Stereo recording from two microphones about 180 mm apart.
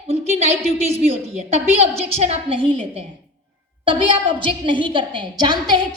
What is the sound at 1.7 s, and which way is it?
A woman's voice, 35° right (ahead or behind).